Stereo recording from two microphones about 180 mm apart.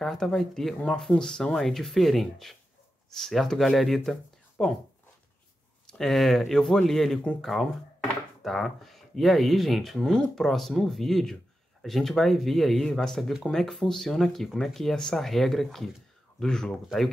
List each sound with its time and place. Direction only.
0.0 s speech: centre (ahead or behind)
5.9 s speech: centre (ahead or behind)